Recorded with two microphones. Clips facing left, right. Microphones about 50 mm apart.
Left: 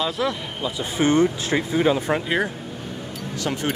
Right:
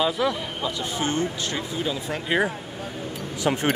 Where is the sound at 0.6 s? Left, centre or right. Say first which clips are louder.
Left 3 dB; centre.